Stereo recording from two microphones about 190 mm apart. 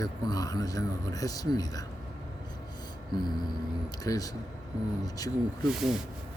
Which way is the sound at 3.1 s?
20° left (ahead or behind).